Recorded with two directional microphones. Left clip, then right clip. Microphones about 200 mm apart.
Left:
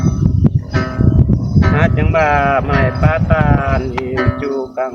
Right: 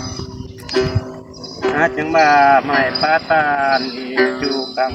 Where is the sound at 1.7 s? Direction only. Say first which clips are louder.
Right 2 dB; 35° left (ahead or behind).